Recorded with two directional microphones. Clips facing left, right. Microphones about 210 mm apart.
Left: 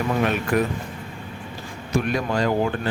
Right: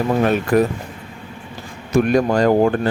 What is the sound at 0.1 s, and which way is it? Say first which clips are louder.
Speech: right 6 dB; 35° right (ahead or behind).